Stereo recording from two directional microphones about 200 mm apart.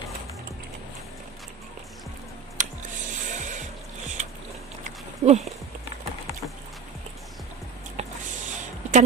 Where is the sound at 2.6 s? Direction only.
40° right (ahead or behind).